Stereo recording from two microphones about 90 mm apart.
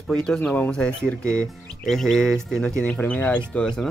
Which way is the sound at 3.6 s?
5° left (ahead or behind).